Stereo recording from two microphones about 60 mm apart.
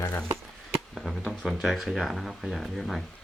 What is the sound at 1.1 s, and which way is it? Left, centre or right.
Speech, centre.